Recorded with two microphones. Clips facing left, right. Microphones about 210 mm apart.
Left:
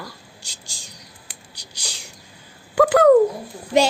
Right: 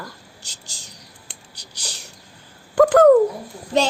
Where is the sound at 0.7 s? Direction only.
10° left (ahead or behind).